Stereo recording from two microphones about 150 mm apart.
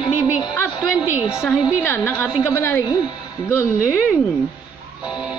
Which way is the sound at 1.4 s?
15° left (ahead or behind).